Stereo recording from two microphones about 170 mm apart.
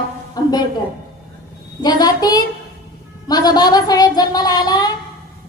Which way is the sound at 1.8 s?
25° left (ahead or behind).